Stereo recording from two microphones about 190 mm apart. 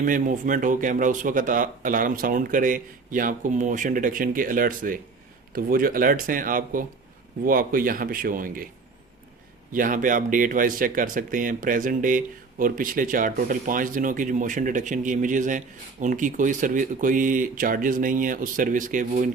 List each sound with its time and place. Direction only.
0.0 s speech: 45° right (ahead or behind)
9.7 s speech: 45° right (ahead or behind)